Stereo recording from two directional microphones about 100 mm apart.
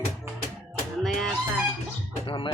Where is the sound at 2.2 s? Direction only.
55° left (ahead or behind).